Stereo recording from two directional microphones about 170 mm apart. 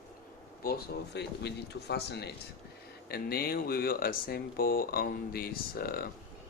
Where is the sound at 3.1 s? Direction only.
65° left (ahead or behind).